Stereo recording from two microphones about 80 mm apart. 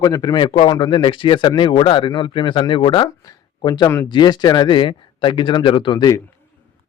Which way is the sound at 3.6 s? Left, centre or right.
Left.